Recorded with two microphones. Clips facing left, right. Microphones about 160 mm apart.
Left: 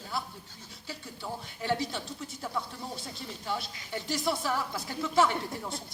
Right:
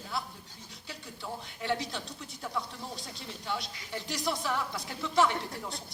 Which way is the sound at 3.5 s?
Centre (ahead or behind).